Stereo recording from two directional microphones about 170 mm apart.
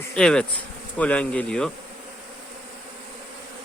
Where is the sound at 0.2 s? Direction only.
5° left (ahead or behind).